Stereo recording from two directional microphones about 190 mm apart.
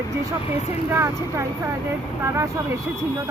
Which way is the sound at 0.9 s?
15° right (ahead or behind).